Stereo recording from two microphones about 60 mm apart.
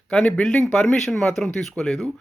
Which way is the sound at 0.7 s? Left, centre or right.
Centre.